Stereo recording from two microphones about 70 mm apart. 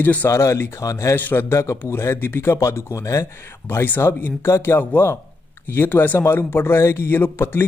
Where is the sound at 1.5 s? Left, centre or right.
Left.